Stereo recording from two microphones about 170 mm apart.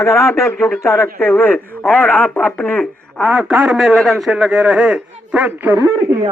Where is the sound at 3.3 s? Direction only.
5° right (ahead or behind).